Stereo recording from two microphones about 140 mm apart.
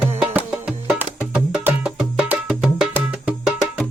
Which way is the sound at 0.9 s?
5° right (ahead or behind).